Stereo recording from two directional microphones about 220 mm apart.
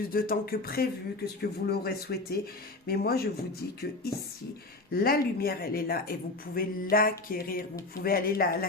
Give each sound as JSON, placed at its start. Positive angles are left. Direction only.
{"t": 0.1, "sound": "speech", "side_deg": 40}